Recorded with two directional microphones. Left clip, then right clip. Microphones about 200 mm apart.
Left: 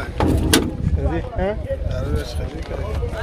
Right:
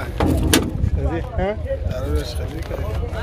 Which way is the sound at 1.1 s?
5° right (ahead or behind).